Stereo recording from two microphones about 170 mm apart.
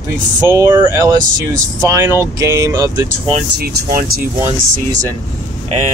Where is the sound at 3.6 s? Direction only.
60° right (ahead or behind).